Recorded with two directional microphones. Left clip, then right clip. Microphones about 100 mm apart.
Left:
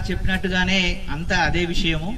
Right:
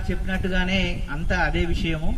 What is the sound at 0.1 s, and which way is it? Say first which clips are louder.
A man's voice: left 4 dB; 30° left (ahead or behind).